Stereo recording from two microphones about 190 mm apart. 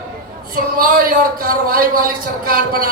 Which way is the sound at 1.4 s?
50° right (ahead or behind).